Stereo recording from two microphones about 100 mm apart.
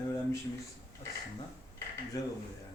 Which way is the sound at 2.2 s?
40° left (ahead or behind).